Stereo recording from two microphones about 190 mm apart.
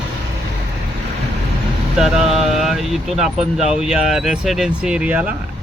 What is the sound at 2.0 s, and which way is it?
Speech, centre (ahead or behind).